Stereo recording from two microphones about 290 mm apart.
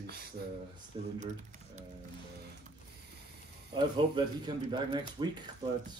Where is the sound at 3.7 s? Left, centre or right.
Centre.